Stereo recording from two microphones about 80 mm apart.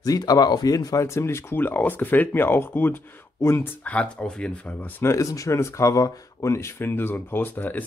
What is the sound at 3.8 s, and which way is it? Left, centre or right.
Speech, centre.